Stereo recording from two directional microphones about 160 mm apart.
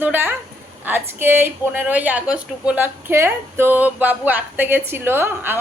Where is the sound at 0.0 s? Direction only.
10° right (ahead or behind).